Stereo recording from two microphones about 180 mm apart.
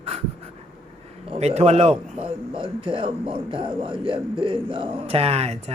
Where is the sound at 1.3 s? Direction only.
35° right (ahead or behind).